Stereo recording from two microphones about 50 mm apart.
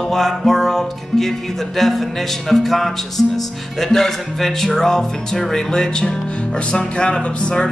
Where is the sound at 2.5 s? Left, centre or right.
Centre.